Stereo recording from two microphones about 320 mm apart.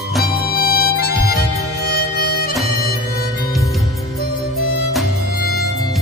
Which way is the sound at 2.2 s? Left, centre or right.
Left.